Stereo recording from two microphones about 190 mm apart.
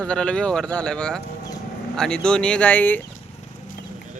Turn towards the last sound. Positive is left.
turn(degrees=10)  # may be behind; listen again after turning